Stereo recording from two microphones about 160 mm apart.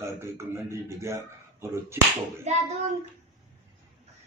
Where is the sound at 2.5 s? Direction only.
45° right (ahead or behind).